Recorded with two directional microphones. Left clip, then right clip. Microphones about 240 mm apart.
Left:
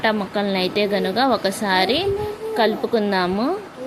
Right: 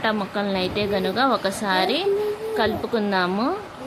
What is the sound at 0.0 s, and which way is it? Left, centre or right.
A woman's voice, centre.